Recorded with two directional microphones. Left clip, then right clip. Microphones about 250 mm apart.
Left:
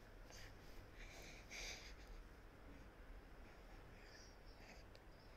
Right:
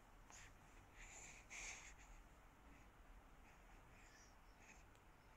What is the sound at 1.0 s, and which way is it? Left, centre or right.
Wheeze, centre.